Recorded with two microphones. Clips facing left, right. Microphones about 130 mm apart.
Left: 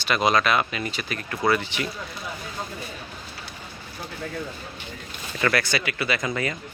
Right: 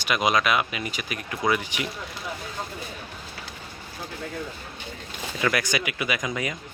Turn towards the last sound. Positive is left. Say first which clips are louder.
# left 2 dB
turn(degrees=-10)  # may be behind; listen again after turning